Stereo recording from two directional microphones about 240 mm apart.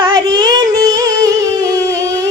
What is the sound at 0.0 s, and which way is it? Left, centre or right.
Child singing, centre.